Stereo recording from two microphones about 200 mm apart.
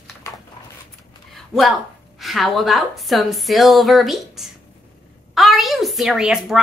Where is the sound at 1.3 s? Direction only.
Centre (ahead or behind).